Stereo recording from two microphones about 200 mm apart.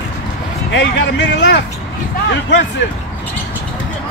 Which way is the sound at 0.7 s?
60° left (ahead or behind).